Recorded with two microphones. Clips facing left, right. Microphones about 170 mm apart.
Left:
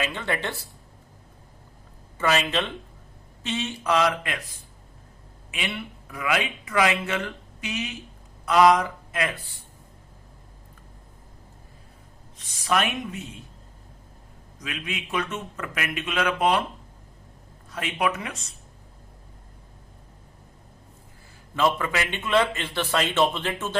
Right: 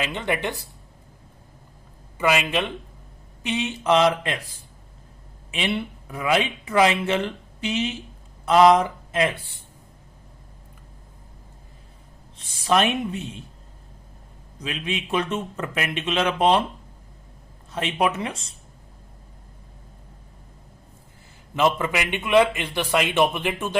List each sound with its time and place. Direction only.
0.0 s a man's voice: 20° right (ahead or behind)
2.1 s a man's voice: 15° right (ahead or behind)
12.4 s speech: 30° right (ahead or behind)
14.6 s speech: 30° right (ahead or behind)
17.7 s speech: 25° right (ahead or behind)
21.5 s a man's voice: 20° right (ahead or behind)